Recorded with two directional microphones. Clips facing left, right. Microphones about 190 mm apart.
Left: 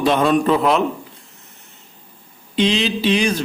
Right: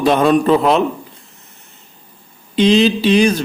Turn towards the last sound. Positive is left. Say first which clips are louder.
# right 6 dB
turn(degrees=-40)  # may be behind; listen again after turning